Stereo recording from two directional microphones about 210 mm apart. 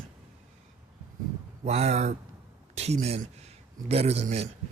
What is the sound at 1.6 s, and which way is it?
Speech, 30° right (ahead or behind).